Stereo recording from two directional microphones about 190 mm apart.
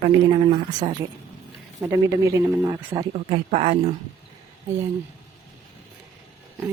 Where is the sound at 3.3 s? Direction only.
35° right (ahead or behind).